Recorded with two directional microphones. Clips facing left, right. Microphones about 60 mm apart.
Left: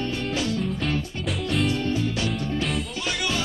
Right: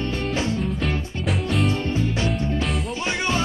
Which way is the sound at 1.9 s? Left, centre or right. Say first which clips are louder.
Right 2 dB; right.